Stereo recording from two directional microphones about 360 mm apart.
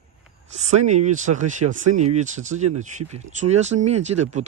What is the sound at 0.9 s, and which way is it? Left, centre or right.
Speech, centre.